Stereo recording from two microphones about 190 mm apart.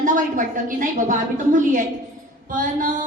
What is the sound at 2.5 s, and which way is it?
Speech, 45° right (ahead or behind).